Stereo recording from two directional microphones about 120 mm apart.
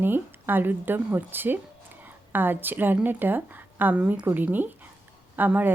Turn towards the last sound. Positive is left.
turn(degrees=-15)  # may be behind; listen again after turning